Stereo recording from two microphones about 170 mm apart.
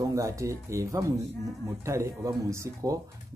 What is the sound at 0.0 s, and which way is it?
Speech, 20° right (ahead or behind).